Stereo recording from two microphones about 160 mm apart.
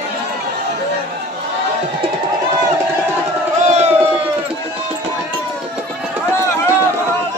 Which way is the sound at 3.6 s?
45° right (ahead or behind).